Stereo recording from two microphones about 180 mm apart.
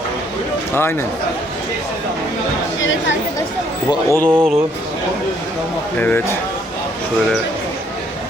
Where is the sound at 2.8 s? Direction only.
90° left.